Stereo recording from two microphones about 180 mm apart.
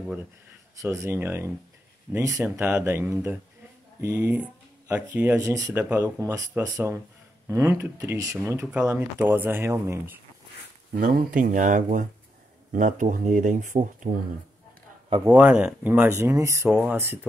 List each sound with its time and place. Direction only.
0.7 s speech: 15° right (ahead or behind)
11.0 s speech: 50° right (ahead or behind)
15.2 s speech: 10° right (ahead or behind)